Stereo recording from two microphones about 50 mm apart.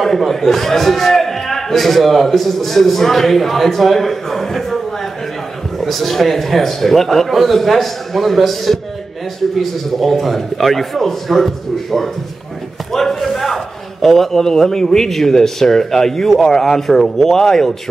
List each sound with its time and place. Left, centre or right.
0.0 s a man's voice: centre
12.9 s a sound: centre
14.0 s a man's voice: centre